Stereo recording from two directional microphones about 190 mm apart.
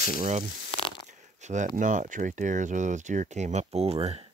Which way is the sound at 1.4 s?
40° right (ahead or behind).